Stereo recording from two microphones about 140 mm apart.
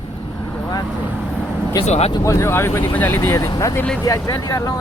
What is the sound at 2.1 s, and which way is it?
Speech, 20° left (ahead or behind).